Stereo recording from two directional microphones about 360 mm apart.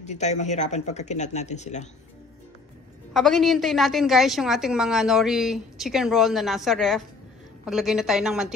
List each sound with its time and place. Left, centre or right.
0.0 s speech: centre
3.1 s a woman's voice: centre